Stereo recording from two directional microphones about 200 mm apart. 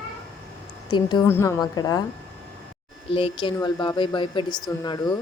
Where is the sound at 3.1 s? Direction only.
25° left (ahead or behind).